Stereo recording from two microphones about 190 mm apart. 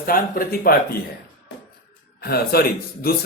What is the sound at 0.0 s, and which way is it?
Speech, 50° left (ahead or behind).